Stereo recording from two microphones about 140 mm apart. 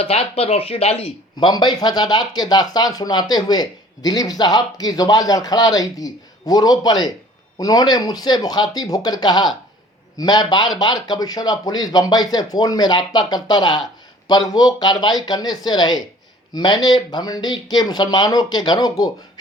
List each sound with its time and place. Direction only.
0.0 s speech: 45° left (ahead or behind)
1.5 s speech: 30° left (ahead or behind)